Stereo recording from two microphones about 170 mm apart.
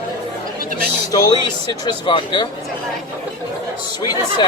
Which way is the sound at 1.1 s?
20° left (ahead or behind).